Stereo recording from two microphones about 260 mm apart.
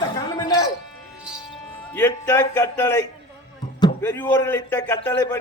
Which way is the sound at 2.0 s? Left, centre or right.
Centre.